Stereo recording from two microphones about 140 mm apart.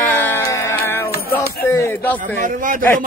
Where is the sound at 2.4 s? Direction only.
70° right (ahead or behind).